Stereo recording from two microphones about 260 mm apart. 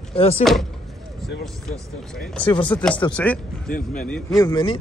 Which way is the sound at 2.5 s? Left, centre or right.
Centre.